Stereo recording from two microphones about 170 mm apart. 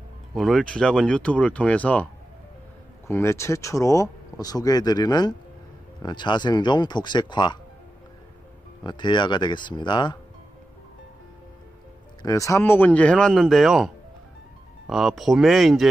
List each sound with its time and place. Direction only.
0.3 s speech: centre (ahead or behind)
3.1 s speech: 15° left (ahead or behind)
8.8 s speech: 25° left (ahead or behind)
12.2 s speech: 20° left (ahead or behind); by 15.9 s centre (ahead or behind)